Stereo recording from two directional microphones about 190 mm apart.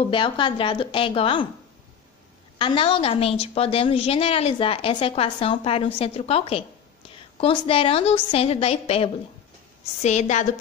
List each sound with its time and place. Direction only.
0.1 s a woman's voice: 25° left (ahead or behind)
2.6 s a woman's voice: 25° left (ahead or behind)